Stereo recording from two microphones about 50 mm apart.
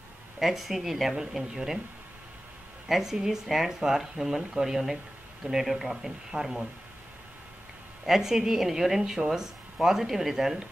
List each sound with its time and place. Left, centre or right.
0.4 s speech: centre
2.9 s speech: centre
8.0 s speech: centre